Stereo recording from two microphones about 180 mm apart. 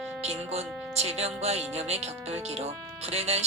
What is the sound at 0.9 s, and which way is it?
A woman's voice, 35° right (ahead or behind).